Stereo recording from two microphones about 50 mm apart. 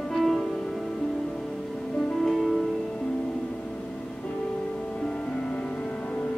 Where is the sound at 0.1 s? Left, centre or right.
Centre.